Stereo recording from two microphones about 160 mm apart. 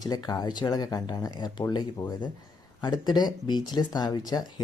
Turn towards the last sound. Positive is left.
turn(degrees=25)  # may be behind; listen again after turning